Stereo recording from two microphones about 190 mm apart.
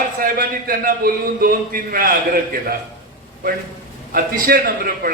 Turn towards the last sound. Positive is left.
turn(degrees=-50)  # may be behind; listen again after turning